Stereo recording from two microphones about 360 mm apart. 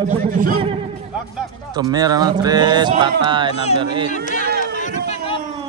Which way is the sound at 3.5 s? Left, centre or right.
Centre.